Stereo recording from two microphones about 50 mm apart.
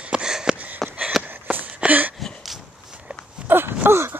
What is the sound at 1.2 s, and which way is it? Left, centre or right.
Walk, right.